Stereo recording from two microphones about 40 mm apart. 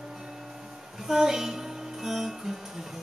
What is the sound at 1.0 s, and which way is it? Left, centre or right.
Music, centre.